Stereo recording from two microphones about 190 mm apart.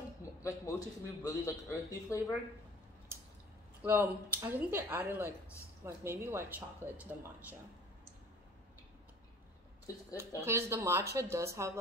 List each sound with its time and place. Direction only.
0.2 s a man's voice: 15° left (ahead or behind)
3.8 s speech: 10° right (ahead or behind)
10.4 s speech: 15° right (ahead or behind)